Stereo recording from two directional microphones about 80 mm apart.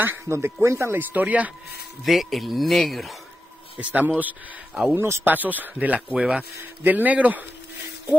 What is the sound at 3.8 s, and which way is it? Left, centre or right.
Speech, centre.